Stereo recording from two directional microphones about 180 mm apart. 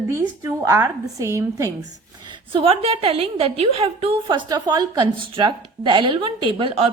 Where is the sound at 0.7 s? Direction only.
15° right (ahead or behind).